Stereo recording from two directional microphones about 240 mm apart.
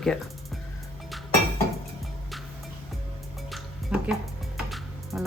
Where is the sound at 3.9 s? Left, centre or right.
Centre.